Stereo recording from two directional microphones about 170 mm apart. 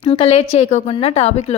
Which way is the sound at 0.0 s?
35° left (ahead or behind).